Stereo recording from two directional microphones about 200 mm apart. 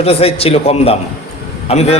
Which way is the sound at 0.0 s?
30° left (ahead or behind).